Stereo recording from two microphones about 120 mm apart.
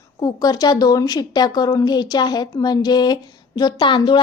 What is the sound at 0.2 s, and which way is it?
A woman's voice, 35° left (ahead or behind).